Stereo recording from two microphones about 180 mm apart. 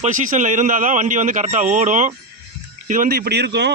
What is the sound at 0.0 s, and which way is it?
A man's voice, 45° right (ahead or behind).